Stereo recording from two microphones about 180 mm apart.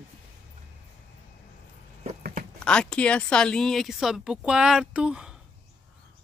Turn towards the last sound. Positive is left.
turn(degrees=-5)  # may be behind; listen again after turning